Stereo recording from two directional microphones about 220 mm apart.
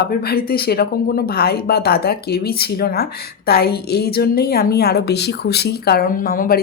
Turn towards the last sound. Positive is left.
turn(degrees=40)  # may be behind; listen again after turning